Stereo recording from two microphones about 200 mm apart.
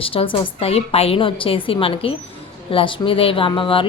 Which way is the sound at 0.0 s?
25° left (ahead or behind).